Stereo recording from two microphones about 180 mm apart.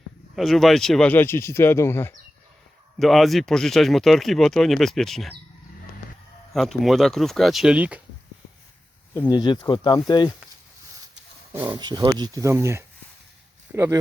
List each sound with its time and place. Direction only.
0.3 s speech: centre (ahead or behind)
3.0 s speech: centre (ahead or behind)
6.5 s speech: centre (ahead or behind)
9.3 s speech: 25° left (ahead or behind)
11.5 s speech: 10° right (ahead or behind)
11.8 s speech: 25° right (ahead or behind)